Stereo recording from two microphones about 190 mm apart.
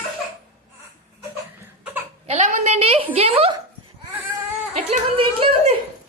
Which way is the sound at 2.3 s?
35° right (ahead or behind).